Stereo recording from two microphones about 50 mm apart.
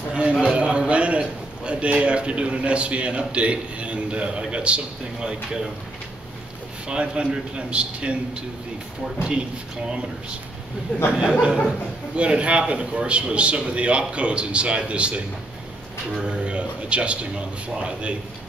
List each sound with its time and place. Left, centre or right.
0.1 s a sound: centre
1.7 s a man's voice: right
6.9 s a man's voice: centre
10.9 s speech: left
11.4 s a man's voice: centre